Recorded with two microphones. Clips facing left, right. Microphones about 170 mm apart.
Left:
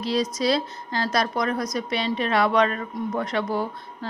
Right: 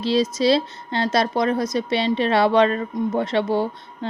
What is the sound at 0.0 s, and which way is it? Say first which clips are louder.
Speech: right 4 dB; 25° right (ahead or behind).